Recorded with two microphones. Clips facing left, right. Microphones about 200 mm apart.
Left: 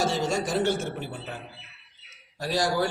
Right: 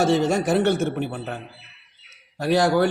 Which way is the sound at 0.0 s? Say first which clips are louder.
Right 7 dB; 60° right (ahead or behind).